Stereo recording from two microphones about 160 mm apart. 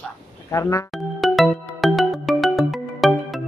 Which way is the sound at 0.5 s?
20° left (ahead or behind).